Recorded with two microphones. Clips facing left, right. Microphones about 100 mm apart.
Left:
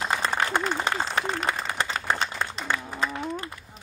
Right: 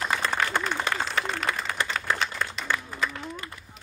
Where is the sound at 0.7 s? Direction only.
25° left (ahead or behind).